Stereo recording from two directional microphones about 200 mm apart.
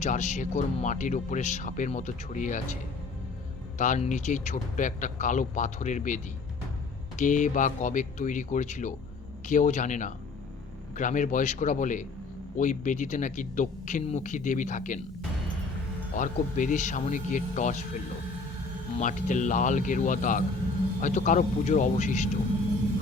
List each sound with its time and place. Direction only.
0.0 s speech: 35° left (ahead or behind)
3.8 s speech: 40° left (ahead or behind)
16.1 s speech: 40° left (ahead or behind)
18.9 s speech: 40° left (ahead or behind)